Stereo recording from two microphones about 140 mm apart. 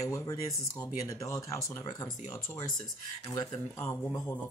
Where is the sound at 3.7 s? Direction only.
10° left (ahead or behind).